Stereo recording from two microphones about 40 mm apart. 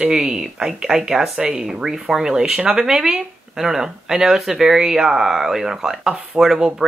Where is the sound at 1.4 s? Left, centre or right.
Centre.